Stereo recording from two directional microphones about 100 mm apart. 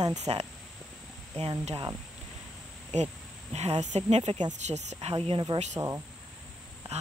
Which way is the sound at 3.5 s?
90° right.